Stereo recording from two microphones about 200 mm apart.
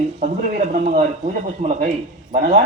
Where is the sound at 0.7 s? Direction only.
35° right (ahead or behind).